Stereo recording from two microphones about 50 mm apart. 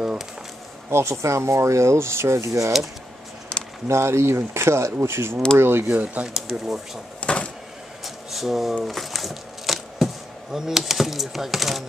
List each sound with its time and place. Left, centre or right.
0.8 s speech: right
3.8 s speech: right
5.9 s speech: right
6.2 s speech: centre
7.2 s a sound: left
8.0 s a sound: centre
10.5 s speech: centre